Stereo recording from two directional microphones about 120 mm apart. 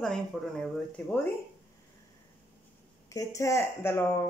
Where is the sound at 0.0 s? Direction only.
5° left (ahead or behind).